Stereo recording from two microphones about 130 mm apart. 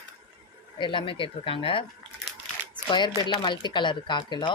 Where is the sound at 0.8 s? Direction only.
40° left (ahead or behind).